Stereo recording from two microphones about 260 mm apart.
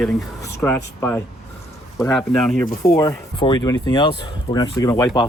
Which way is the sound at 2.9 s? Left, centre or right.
Centre.